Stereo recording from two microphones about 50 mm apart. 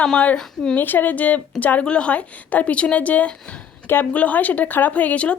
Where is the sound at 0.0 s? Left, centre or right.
Left.